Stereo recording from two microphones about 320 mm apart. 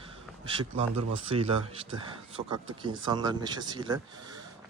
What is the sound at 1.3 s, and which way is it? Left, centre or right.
Speech, centre.